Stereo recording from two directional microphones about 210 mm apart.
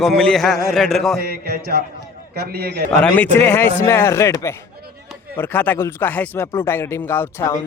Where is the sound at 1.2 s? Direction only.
45° right (ahead or behind).